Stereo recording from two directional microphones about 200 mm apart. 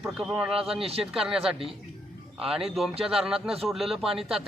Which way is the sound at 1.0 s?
5° right (ahead or behind).